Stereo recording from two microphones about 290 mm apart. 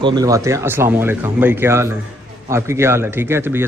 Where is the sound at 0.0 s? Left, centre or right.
Centre.